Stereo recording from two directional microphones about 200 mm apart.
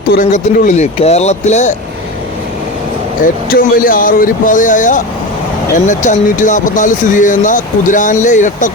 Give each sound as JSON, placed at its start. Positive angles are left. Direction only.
{"t": 0.1, "sound": "speech", "side_deg": 45}
{"t": 3.2, "sound": "speech", "side_deg": 45}